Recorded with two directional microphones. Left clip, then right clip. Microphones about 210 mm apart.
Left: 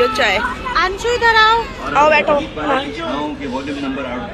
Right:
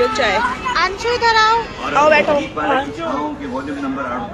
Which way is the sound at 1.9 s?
15° right (ahead or behind).